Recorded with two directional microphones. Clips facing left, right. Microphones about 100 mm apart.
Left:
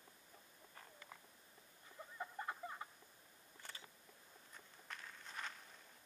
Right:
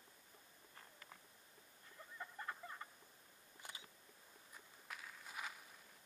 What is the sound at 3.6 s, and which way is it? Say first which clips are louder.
Camera: even; 15° right (ahead or behind).